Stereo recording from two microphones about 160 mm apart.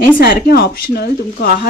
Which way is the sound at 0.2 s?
70° left (ahead or behind).